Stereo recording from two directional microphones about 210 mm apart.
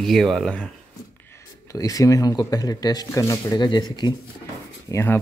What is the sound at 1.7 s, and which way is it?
Speech, 15° left (ahead or behind).